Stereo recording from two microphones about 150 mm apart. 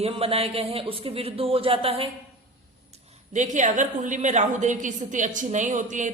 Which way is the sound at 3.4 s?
55° right (ahead or behind).